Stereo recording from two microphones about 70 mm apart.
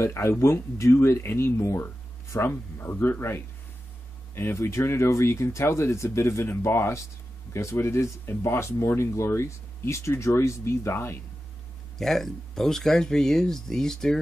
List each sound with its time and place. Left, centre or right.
0.0 s speech: left
12.0 s speech: centre